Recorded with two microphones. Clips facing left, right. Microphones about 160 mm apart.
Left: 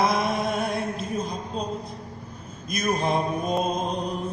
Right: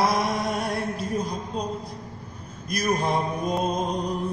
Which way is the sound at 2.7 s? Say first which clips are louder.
Right 1 dB; 20° left (ahead or behind).